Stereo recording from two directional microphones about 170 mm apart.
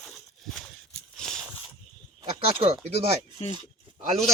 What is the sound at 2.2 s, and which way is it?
Speech, 30° right (ahead or behind).